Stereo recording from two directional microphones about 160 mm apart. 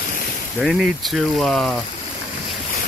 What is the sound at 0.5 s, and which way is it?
Speech, centre (ahead or behind).